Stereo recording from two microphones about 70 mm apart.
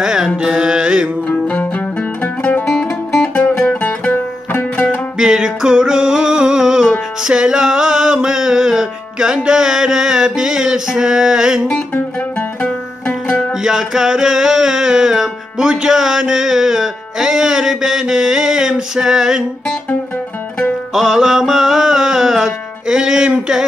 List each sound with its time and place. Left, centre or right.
0.0 s carnatic music: centre
1.5 s music: left
3.3 s music: left
5.2 s music: centre
11.9 s music: left
13.6 s music: centre
20.9 s music: centre